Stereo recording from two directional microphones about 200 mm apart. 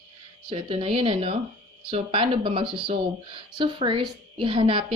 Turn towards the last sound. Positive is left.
turn(degrees=-25)  # may be behind; listen again after turning